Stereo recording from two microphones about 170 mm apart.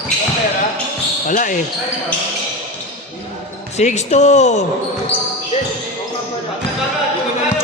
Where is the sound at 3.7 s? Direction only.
40° left (ahead or behind).